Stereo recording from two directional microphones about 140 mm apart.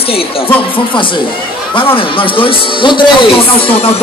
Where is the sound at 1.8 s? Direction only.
40° left (ahead or behind).